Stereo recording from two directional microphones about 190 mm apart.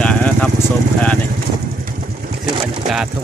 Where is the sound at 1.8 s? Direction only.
50° right (ahead or behind).